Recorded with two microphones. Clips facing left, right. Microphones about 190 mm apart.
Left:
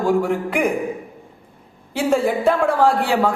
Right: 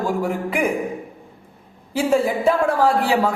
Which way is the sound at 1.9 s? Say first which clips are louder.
Even; 5° right (ahead or behind).